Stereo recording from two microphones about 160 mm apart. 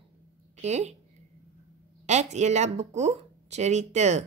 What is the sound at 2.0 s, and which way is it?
Speech, 45° right (ahead or behind).